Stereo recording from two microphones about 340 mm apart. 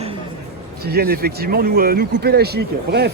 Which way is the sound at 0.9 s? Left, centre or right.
Right.